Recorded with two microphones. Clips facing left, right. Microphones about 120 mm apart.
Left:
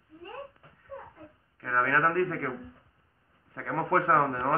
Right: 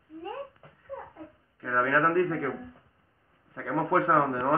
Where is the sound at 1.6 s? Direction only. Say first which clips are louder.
Right 1 dB; 15° right (ahead or behind).